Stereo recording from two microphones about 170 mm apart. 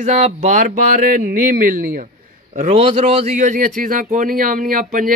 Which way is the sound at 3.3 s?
50° right (ahead or behind).